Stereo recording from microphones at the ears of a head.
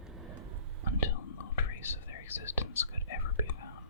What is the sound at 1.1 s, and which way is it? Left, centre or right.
Whispering, left.